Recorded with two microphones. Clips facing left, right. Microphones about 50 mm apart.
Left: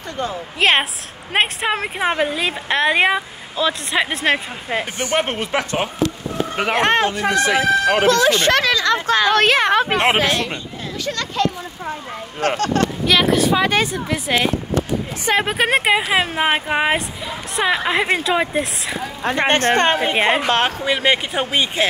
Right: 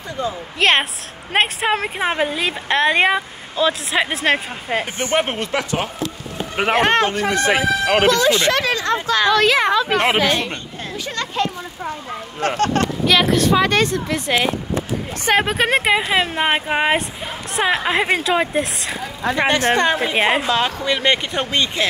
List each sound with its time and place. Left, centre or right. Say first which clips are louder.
0.6 s a woman's voice: even; centre
5.5 s speech: even; left
6.7 s a woman's voice: right 1 dB; centre
7.3 s speech: left 2 dB; right
8.1 s speech: left 1 dB; left
9.8 s speech: even; left
11.1 s speech: left 1 dB; right
12.4 s speech: even; right
13.0 s a woman's voice: right 1 dB; centre
18.9 s speech: even; left
20.8 s speech: left 1 dB; centre